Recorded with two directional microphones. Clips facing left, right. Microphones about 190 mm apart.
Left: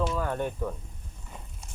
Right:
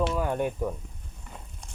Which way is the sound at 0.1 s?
10° right (ahead or behind).